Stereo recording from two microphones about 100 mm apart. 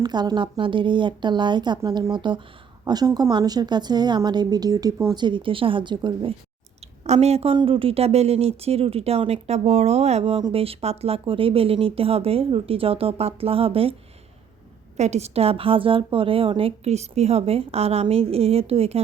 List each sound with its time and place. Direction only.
0.0 s speech: 45° right (ahead or behind)
2.8 s a woman's voice: 40° right (ahead or behind)
5.1 s speech: 50° right (ahead or behind)
7.0 s a woman's voice: 90° right; by 13.9 s 70° right (ahead or behind)
15.1 s a woman's voice: 85° right